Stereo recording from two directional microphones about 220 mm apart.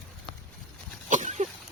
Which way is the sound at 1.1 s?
35° right (ahead or behind).